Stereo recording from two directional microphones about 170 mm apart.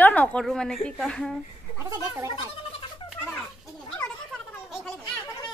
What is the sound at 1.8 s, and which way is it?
Speech, 20° right (ahead or behind).